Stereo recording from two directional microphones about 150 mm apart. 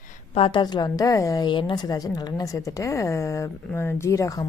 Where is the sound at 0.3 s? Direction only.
35° left (ahead or behind).